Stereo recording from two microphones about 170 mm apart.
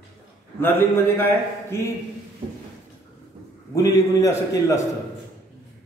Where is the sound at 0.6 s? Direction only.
10° left (ahead or behind).